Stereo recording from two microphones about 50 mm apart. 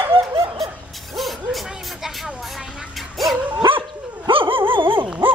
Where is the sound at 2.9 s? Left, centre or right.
Centre.